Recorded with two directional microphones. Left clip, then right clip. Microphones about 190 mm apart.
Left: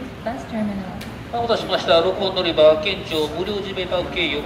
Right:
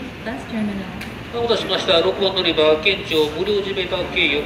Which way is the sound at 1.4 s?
25° left (ahead or behind).